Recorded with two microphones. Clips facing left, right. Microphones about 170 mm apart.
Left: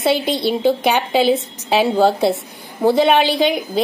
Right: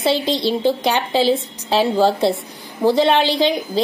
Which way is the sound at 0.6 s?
5° left (ahead or behind).